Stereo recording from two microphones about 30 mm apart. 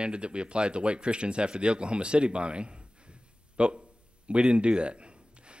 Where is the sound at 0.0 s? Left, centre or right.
Right.